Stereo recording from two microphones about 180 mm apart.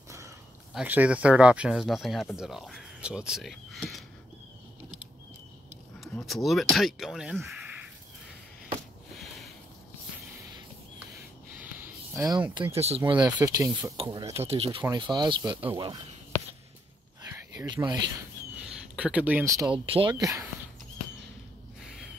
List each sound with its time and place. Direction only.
0.7 s speech: 10° right (ahead or behind)
5.9 s speech: centre (ahead or behind)
11.8 s a sound: 10° right (ahead or behind)
12.7 s speech: 35° right (ahead or behind)
13.1 s speech: 20° right (ahead or behind)
13.9 s speech: 25° right (ahead or behind)
15.5 s speech: 10° right (ahead or behind)
17.3 s a sound: 15° right (ahead or behind)
18.7 s speech: 5° right (ahead or behind)
19.9 s speech: 30° right (ahead or behind)